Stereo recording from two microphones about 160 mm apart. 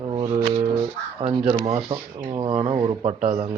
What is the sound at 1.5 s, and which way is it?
Speech, 30° right (ahead or behind).